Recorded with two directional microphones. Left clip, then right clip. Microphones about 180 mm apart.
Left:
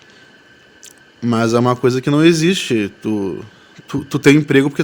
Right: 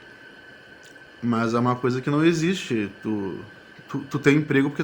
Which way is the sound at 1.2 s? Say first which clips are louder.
Left 8 dB; 50° left (ahead or behind).